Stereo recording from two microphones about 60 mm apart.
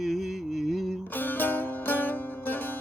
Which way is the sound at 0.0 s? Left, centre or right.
Centre.